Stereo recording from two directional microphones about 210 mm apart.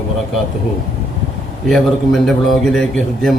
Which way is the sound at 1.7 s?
Centre (ahead or behind).